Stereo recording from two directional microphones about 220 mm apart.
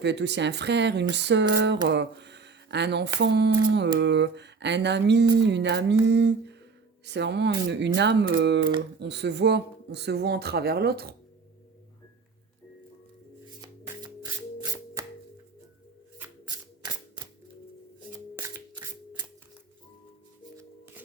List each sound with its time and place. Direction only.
0.0 s speech: 50° right (ahead or behind)
1.1 s a sound: 50° right (ahead or behind)
3.2 s speech: 50° right (ahead or behind)
13.6 s music: 15° right (ahead or behind)
18.3 s shuffling cards: 10° right (ahead or behind)
20.6 s shuffling cards: 10° right (ahead or behind)